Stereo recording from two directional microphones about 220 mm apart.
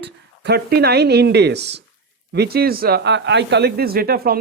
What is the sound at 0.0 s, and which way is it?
Speech, 50° right (ahead or behind).